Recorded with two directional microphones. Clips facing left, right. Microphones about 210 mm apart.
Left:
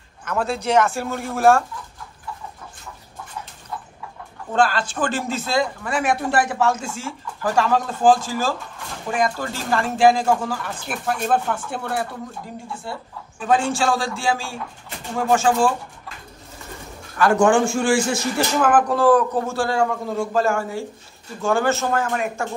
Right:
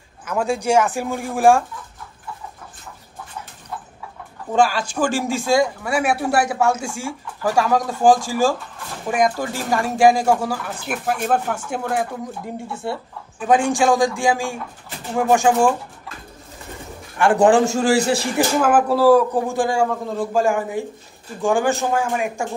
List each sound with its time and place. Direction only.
0.2 s speech: 10° right (ahead or behind)
4.5 s speech: 10° right (ahead or behind)
17.2 s a man's voice: 30° right (ahead or behind)
18.5 s speech: 10° right (ahead or behind)